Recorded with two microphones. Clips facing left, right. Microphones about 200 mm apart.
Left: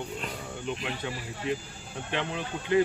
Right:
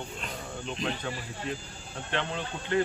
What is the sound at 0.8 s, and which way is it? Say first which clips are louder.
Speech: right 1 dB; 15° left (ahead or behind).